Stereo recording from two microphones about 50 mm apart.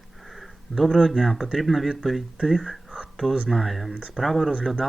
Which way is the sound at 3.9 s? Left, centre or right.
Right.